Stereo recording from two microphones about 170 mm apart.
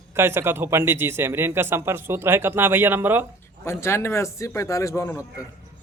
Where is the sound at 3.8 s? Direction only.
15° left (ahead or behind).